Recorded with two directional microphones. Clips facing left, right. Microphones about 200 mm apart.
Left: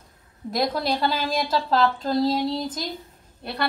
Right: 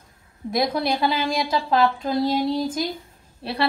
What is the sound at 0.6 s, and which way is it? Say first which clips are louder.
Speech: right 2 dB; centre (ahead or behind).